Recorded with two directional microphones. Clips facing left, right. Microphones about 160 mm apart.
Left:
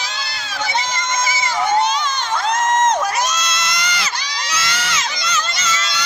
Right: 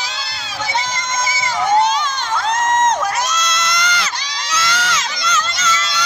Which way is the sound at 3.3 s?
Centre (ahead or behind).